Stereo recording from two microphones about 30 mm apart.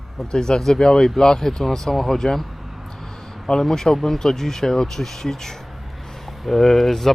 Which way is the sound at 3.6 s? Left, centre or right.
Centre.